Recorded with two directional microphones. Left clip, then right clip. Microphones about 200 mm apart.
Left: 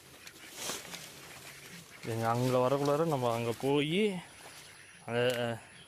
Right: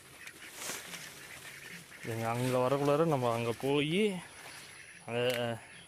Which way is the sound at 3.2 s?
Centre (ahead or behind).